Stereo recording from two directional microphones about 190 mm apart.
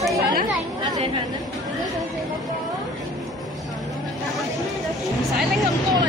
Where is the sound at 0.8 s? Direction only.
25° right (ahead or behind).